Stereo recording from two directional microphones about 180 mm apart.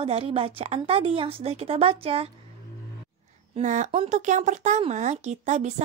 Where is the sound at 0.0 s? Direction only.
30° right (ahead or behind).